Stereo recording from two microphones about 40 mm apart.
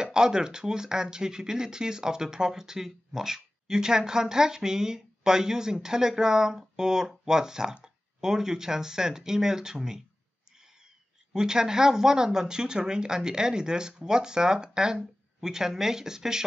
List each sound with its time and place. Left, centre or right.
0.0 s speech: centre
11.3 s speech: centre